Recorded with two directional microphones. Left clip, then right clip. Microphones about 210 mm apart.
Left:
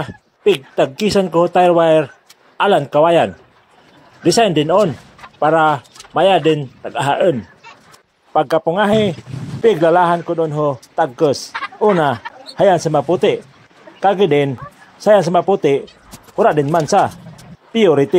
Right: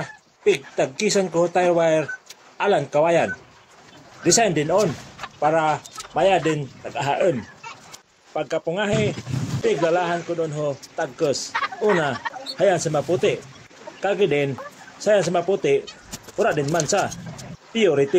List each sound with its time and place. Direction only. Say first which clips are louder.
0.4 s speech: left 6 dB; 35° left (ahead or behind)